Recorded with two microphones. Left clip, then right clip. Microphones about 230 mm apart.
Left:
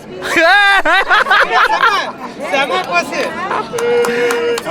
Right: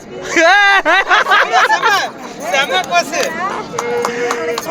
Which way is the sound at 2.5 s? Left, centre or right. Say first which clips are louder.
Right 1 dB; right.